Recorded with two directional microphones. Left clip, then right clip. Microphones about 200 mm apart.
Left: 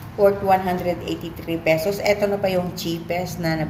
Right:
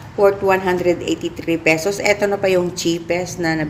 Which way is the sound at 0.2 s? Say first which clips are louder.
Right 2 dB; 45° right (ahead or behind).